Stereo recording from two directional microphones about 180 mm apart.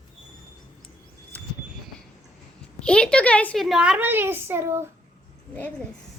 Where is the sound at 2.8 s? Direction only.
5° left (ahead or behind); by 4.9 s 15° right (ahead or behind).